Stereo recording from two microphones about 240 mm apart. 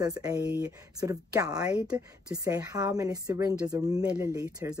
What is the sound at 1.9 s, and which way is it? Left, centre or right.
Speech, centre.